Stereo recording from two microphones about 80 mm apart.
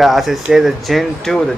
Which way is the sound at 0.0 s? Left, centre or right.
Centre.